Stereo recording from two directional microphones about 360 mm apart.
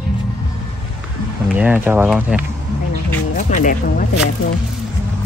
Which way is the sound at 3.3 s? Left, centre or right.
Left.